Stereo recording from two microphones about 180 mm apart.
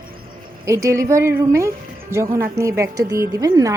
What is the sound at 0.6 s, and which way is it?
A woman's voice, 15° right (ahead or behind).